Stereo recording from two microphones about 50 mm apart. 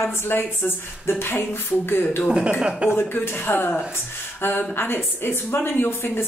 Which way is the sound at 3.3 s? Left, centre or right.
Left.